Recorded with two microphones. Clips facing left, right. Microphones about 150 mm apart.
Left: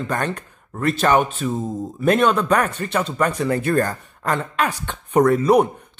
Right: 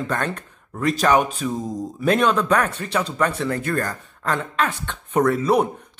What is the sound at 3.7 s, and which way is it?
Speech, 30° left (ahead or behind).